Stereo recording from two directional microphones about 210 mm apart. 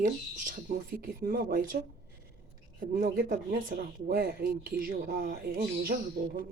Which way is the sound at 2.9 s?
40° right (ahead or behind).